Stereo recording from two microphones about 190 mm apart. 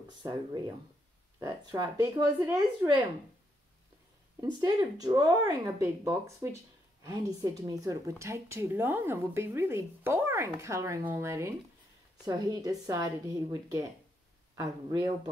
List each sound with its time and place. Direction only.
0.2 s a woman's voice: 20° right (ahead or behind)
4.4 s a woman's voice: 20° right (ahead or behind)